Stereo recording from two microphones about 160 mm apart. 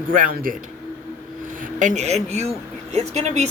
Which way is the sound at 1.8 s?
45° right (ahead or behind).